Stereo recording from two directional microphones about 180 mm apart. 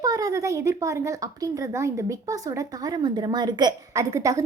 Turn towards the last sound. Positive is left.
turn(degrees=-15)  # may be behind; listen again after turning